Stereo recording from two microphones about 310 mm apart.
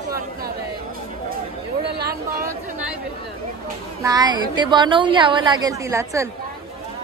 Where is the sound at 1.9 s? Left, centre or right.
Right.